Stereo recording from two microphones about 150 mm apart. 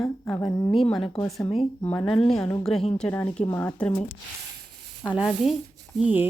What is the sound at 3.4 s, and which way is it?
Speech, 20° left (ahead or behind).